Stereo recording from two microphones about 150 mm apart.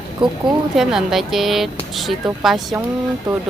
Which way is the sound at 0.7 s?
Centre (ahead or behind).